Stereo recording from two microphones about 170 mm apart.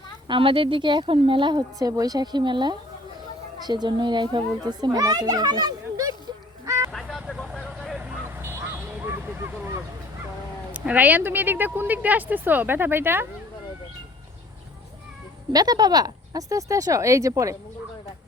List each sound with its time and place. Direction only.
0.3 s a woman's voice: 30° right (ahead or behind)
6.7 s a sound: 20° right (ahead or behind)
6.9 s vehicle: centre (ahead or behind); by 9.8 s 15° right (ahead or behind)
10.7 s speech: 10° right (ahead or behind)
15.5 s a woman's voice: 25° right (ahead or behind)